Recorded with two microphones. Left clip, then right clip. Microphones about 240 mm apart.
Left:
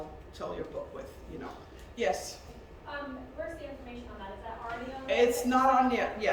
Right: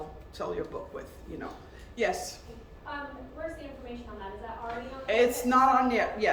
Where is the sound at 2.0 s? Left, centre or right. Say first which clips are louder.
Right 1 dB; centre.